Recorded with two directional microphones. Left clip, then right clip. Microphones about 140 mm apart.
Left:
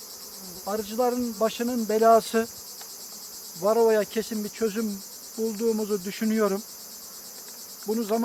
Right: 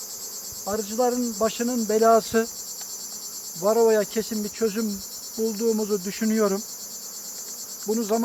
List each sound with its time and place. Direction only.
0.6 s speech: 5° left (ahead or behind)
3.6 s speech: 5° left (ahead or behind)
7.9 s speech: 15° left (ahead or behind)